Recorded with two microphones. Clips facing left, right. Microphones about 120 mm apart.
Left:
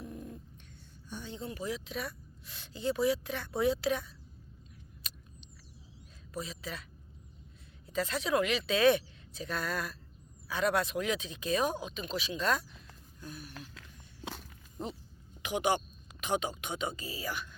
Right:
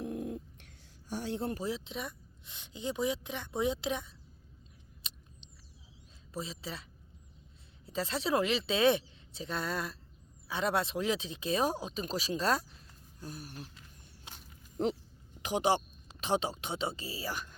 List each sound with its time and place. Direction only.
0.0 s cat: 80° right
1.1 s a sound: 75° right (ahead or behind)
1.5 s speech: 30° right (ahead or behind)
5.0 s a sound: 25° right (ahead or behind)
6.3 s a woman's voice: 25° right (ahead or behind)
7.9 s speech: 30° right (ahead or behind)
14.8 s speech: 90° right
15.4 s speech: 35° right (ahead or behind)